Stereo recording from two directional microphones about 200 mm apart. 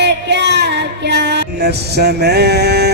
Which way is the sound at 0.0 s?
60° right (ahead or behind).